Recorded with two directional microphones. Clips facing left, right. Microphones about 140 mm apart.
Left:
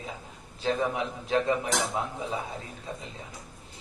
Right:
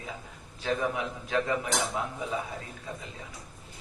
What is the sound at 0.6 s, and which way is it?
A man's voice, 25° left (ahead or behind).